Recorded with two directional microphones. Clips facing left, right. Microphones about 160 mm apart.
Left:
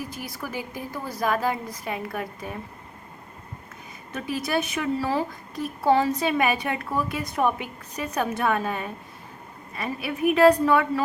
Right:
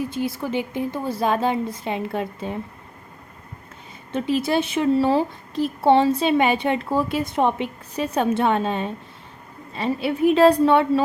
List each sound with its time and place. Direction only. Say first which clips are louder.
0.1 s a woman's voice: right 9 dB; 25° right (ahead or behind)
4.1 s a woman's voice: right 6 dB; 25° right (ahead or behind)